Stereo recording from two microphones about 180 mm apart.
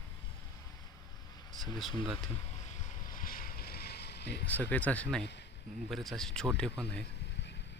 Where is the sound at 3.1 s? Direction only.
50° left (ahead or behind); by 4.5 s 65° left (ahead or behind).